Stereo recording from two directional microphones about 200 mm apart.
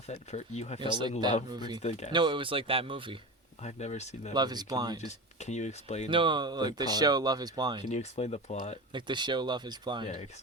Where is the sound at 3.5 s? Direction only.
35° left (ahead or behind).